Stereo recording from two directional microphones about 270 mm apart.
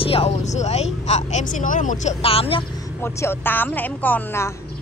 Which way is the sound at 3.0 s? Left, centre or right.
Centre.